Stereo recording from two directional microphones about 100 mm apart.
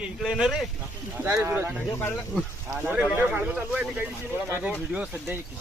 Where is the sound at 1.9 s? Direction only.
25° left (ahead or behind).